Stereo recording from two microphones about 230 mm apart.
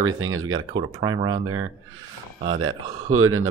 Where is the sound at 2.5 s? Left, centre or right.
Right.